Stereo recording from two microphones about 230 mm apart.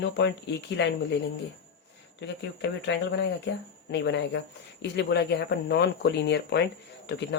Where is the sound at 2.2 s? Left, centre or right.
Left.